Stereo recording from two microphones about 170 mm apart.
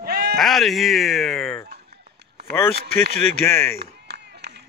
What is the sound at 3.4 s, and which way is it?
Speech, 15° left (ahead or behind).